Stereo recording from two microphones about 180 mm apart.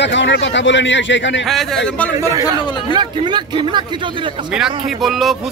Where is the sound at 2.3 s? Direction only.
20° right (ahead or behind).